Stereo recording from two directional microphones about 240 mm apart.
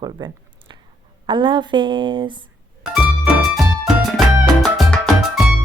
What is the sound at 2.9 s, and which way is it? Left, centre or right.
Music, centre.